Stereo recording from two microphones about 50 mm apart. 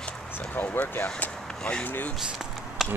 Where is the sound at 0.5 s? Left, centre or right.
Left.